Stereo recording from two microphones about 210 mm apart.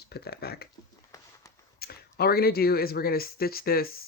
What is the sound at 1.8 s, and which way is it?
Speech, 50° left (ahead or behind).